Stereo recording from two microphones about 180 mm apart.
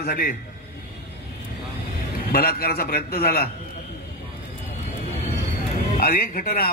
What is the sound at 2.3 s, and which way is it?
A man's voice, 60° left (ahead or behind).